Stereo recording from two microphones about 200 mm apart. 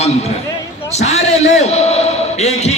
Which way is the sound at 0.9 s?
35° left (ahead or behind).